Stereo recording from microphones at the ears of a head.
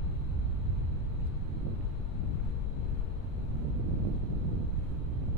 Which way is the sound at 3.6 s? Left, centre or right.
Right.